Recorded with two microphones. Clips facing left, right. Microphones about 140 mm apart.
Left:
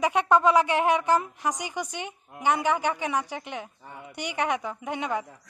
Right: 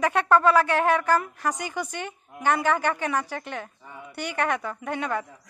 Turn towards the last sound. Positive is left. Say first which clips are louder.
# right 1 dB
turn(degrees=15)  # may be behind; listen again after turning